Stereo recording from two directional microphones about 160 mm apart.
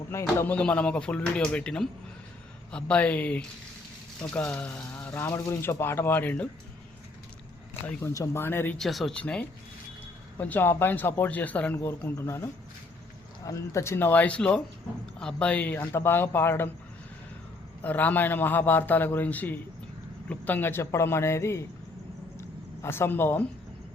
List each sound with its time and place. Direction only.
0.1 s speech: 15° left (ahead or behind)
7.7 s speech: 15° left (ahead or behind)
8.8 s speech: centre (ahead or behind)
17.8 s speech: 10° left (ahead or behind)
22.4 s a sound: 15° left (ahead or behind)